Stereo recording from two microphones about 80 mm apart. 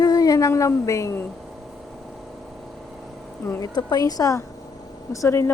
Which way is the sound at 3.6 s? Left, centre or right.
Left.